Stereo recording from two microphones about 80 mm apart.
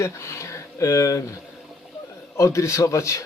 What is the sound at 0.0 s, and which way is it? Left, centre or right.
Speech, left.